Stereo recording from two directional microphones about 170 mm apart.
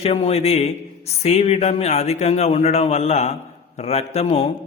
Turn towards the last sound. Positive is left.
turn(degrees=35)  # may be behind; listen again after turning